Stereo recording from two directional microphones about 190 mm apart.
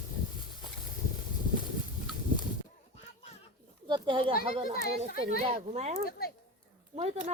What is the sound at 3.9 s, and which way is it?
Speech, 25° right (ahead or behind).